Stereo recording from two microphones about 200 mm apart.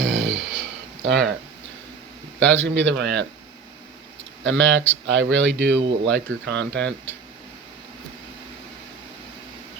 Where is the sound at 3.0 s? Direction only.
60° right (ahead or behind).